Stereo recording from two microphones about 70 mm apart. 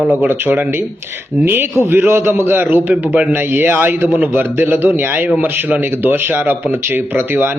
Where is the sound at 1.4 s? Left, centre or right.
Right.